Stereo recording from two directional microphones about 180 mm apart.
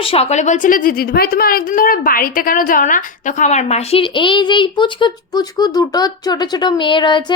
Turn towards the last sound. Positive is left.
turn(degrees=25)  # may be behind; listen again after turning